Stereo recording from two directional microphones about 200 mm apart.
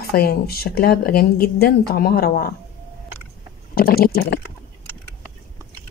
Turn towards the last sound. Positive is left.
turn(degrees=50)  # may be behind; listen again after turning